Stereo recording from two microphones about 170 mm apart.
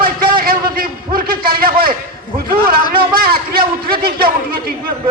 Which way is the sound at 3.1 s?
60° right (ahead or behind).